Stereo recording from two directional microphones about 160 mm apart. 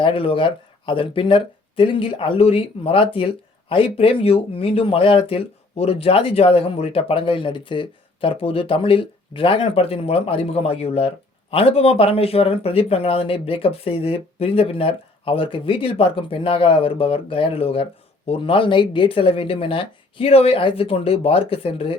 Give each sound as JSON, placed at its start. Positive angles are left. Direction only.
{"t": 0.0, "sound": "speech", "side_deg": 35}